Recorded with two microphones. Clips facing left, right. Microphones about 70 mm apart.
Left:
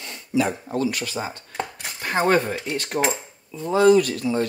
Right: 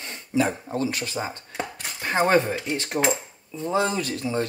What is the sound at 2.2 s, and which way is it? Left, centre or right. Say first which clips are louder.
Speech: left 1 dB; centre.